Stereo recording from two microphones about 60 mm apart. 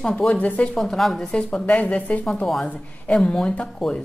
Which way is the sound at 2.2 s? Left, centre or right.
Centre.